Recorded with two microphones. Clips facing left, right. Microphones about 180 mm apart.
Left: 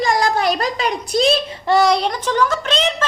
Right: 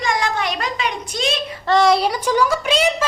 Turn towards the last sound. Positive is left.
turn(degrees=-10)  # may be behind; listen again after turning